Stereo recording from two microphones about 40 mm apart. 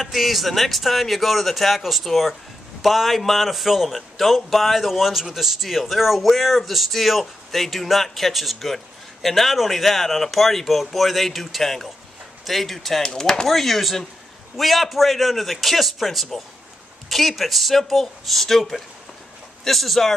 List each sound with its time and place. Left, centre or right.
0.0 s a man's voice: centre
13.0 s speech: centre
13.5 s a man's voice: centre